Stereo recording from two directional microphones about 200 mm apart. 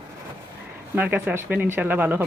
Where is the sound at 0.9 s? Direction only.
10° right (ahead or behind).